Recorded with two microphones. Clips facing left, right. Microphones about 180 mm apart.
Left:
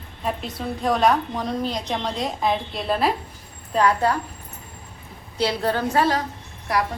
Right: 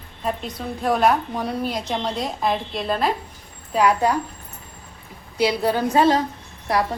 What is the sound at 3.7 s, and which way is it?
Speech, 15° right (ahead or behind).